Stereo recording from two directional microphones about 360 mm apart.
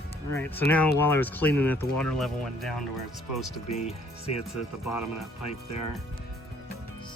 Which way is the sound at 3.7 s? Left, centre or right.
Centre.